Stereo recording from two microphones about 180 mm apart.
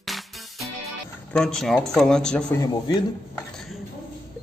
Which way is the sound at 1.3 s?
5° left (ahead or behind).